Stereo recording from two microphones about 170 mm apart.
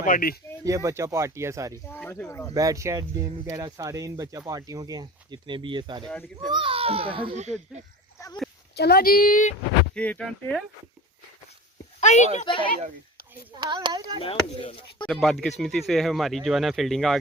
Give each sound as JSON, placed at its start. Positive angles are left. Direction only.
{"t": 0.0, "sound": "speech", "side_deg": 55}
{"t": 0.6, "sound": "speech", "side_deg": -20}
{"t": 1.9, "sound": "speech", "side_deg": 10}
{"t": 2.6, "sound": "speech", "side_deg": -20}
{"t": 6.1, "sound": "speech", "side_deg": 5}
{"t": 6.5, "sound": "a child's voice", "side_deg": -30}
{"t": 8.2, "sound": "a sound", "side_deg": 15}
{"t": 8.7, "sound": "speech", "side_deg": 70}
{"t": 9.9, "sound": "speech", "side_deg": 5}
{"t": 11.9, "sound": "speech", "side_deg": 45}
{"t": 13.6, "sound": "speech", "side_deg": -25}
{"t": 14.2, "sound": "speech", "side_deg": 35}
{"t": 15.0, "sound": "speech", "side_deg": 0}